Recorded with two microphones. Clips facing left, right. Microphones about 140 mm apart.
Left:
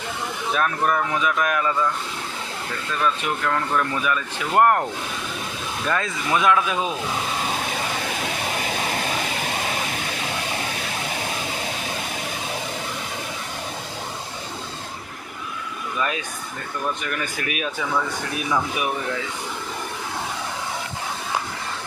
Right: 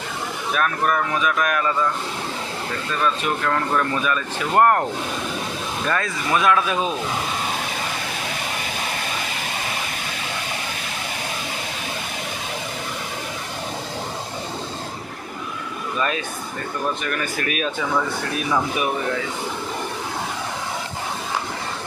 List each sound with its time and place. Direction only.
0.5 s speech: 20° left (ahead or behind)
4.0 s speech: 10° left (ahead or behind)
5.9 s speech: 15° left (ahead or behind)
16.0 s speech: 15° left (ahead or behind)